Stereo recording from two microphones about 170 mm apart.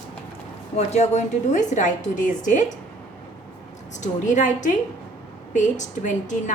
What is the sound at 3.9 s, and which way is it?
A woman's voice, 45° left (ahead or behind).